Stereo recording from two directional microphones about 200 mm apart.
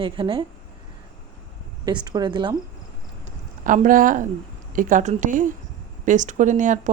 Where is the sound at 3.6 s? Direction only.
40° right (ahead or behind).